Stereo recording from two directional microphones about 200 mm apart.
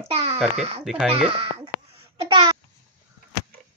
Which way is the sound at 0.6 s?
30° right (ahead or behind).